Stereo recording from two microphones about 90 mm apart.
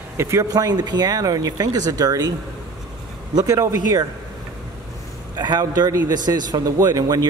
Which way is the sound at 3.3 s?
45° right (ahead or behind).